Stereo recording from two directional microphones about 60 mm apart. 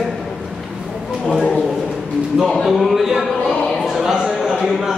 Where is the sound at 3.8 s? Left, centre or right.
Centre.